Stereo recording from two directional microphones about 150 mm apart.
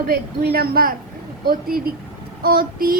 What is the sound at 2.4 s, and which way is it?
Child singing, 75° right (ahead or behind).